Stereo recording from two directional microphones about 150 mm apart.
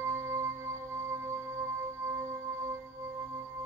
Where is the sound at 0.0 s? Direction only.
20° right (ahead or behind).